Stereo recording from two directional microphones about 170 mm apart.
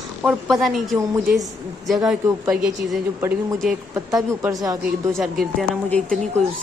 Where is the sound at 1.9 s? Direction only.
Centre (ahead or behind).